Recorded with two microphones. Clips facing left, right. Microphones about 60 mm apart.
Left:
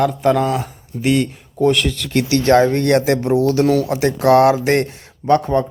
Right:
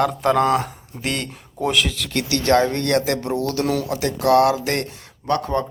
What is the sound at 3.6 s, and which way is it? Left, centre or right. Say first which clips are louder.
Speech: left 7 dB; centre.